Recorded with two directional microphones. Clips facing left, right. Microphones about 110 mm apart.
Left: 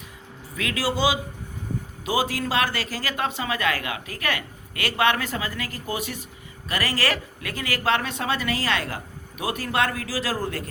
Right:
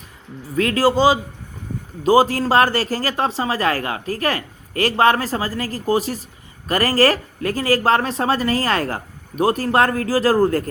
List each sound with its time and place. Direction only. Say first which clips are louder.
0.5 s speech: right 10 dB; 45° right (ahead or behind)